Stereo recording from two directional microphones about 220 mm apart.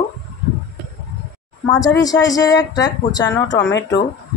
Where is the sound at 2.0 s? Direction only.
15° left (ahead or behind).